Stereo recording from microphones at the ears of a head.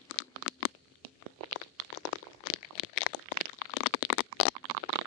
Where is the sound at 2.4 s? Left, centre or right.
Left.